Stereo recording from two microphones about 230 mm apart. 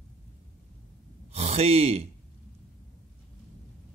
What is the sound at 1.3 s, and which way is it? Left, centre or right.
Speech, right.